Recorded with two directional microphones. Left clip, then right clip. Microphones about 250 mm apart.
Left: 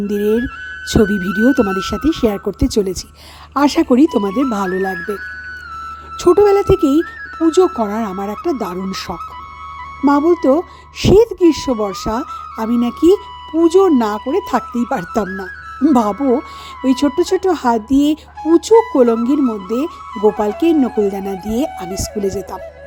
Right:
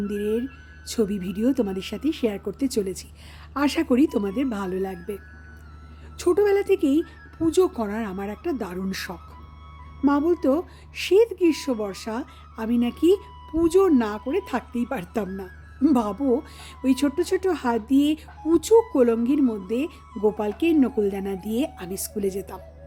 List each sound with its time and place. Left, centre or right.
0.1 s speech: left
4.9 s speech: left
6.1 s speech: left
16.1 s speech: left
16.8 s speech: centre
20.1 s speech: left
20.4 s speech: left